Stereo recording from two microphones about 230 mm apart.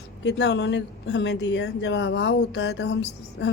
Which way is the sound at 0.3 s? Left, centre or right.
Left.